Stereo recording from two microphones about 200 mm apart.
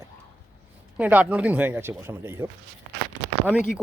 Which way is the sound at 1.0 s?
10° right (ahead or behind).